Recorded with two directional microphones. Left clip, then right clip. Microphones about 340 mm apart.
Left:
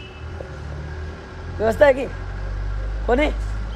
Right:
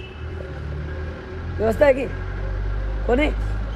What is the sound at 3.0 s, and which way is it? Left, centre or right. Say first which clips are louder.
Speech: left 1 dB; centre.